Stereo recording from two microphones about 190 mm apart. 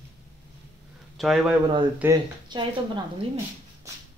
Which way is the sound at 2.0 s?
20° right (ahead or behind).